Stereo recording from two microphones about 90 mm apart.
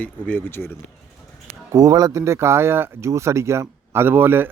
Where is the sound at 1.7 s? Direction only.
40° right (ahead or behind).